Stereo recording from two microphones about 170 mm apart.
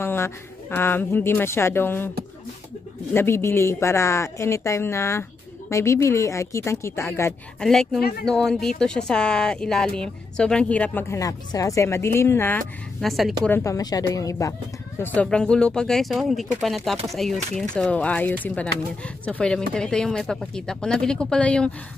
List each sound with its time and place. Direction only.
0.0 s speech: 15° left (ahead or behind)
3.1 s speech: 15° left (ahead or behind)
7.6 s speech: 5° left (ahead or behind)
13.0 s speech: centre (ahead or behind)
13.5 s speech: 20° left (ahead or behind)
15.0 s speech: 10° left (ahead or behind)